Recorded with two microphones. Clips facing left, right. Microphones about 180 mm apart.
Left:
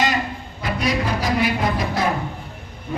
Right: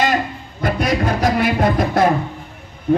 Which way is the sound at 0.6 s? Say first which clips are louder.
Right 4 dB; 50° right (ahead or behind).